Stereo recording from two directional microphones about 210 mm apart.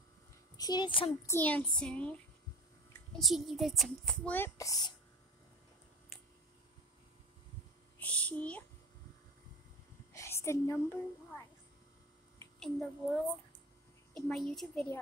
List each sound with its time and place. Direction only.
0.6 s a child's voice: 20° left (ahead or behind)
1.2 s speech: 10° left (ahead or behind)
8.0 s speech: 5° left (ahead or behind)
10.1 s a woman's voice: 15° left (ahead or behind)
12.4 s a child's voice: 5° left (ahead or behind)